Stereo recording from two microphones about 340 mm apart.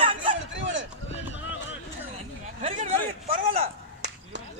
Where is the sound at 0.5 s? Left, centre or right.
Right.